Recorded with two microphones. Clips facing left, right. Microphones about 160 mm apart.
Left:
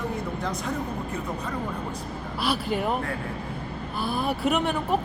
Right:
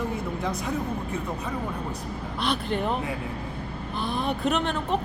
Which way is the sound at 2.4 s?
5° left (ahead or behind).